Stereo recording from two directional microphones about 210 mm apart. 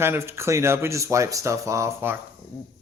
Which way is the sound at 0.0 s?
10° right (ahead or behind).